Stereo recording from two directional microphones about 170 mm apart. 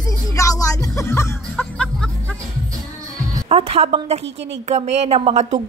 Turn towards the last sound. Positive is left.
turn(degrees=-40)  # may be behind; listen again after turning